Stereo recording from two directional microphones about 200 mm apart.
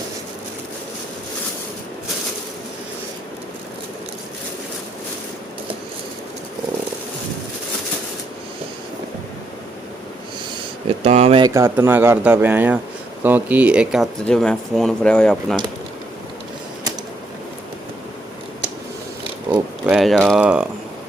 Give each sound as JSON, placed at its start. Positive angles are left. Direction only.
{"t": 11.0, "sound": "speech", "side_deg": -35}
{"t": 11.4, "sound": "speech", "side_deg": -15}
{"t": 19.2, "sound": "a sound", "side_deg": -25}
{"t": 19.8, "sound": "speech", "side_deg": -5}